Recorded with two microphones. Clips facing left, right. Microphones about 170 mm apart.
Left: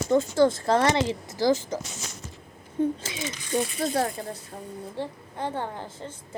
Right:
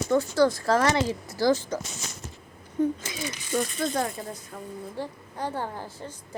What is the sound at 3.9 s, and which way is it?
A woman's voice, 35° left (ahead or behind).